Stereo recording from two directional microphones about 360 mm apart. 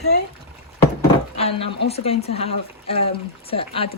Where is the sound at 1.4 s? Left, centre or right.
Centre.